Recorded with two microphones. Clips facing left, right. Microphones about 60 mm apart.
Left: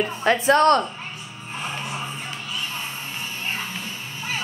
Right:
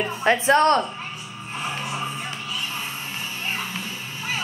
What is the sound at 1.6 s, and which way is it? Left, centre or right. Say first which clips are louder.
Music: right 1 dB; centre.